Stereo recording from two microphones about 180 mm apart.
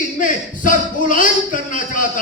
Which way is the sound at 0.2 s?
45° left (ahead or behind).